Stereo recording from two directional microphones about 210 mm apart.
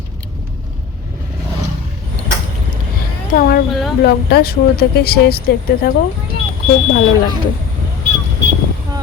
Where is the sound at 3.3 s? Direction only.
40° left (ahead or behind).